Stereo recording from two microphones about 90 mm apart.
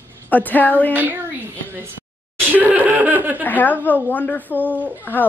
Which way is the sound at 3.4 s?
20° left (ahead or behind).